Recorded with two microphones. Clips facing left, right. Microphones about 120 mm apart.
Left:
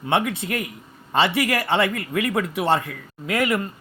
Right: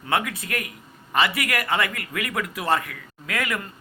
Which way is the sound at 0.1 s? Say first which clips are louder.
Left 3 dB; 25° left (ahead or behind).